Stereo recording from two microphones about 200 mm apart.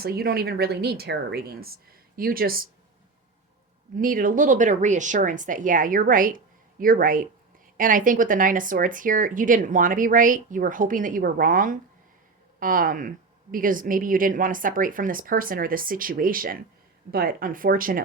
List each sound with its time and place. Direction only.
0.0 s speech: 50° right (ahead or behind)
3.9 s speech: 45° right (ahead or behind)